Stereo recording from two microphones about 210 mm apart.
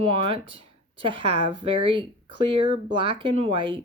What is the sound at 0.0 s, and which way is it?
Speech, 25° right (ahead or behind).